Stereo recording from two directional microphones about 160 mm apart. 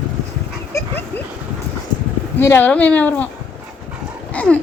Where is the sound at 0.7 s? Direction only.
20° left (ahead or behind).